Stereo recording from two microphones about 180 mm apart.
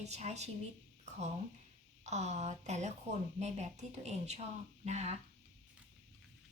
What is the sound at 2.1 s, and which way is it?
A woman's voice, 40° right (ahead or behind).